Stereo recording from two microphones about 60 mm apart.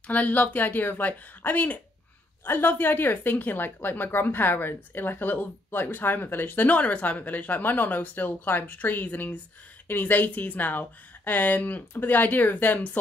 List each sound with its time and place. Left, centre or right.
0.0 s a woman's voice: left